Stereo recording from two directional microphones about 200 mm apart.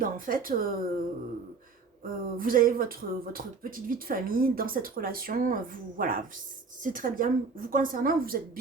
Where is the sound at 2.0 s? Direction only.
45° right (ahead or behind).